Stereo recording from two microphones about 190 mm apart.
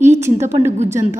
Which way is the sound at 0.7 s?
35° right (ahead or behind).